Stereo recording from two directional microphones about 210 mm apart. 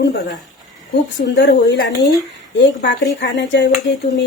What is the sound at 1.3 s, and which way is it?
Dishes, 55° left (ahead or behind).